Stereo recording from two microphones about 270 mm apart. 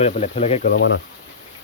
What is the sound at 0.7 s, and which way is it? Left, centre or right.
Speech, left.